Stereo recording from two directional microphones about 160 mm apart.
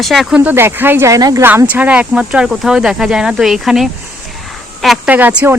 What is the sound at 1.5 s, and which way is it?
Speech, 10° right (ahead or behind).